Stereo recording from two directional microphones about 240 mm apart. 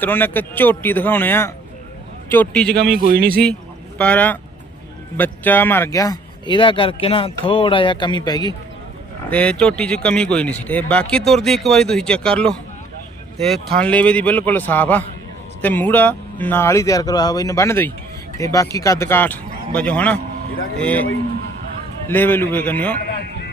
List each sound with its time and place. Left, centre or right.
0.0 s speech: centre
2.7 s a man's voice: right
3.9 s speech: centre
9.3 s speech: centre
23.0 s a sound: left